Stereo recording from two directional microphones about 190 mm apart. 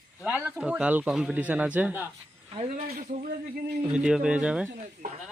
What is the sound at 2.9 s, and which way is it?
Speech, 50° right (ahead or behind).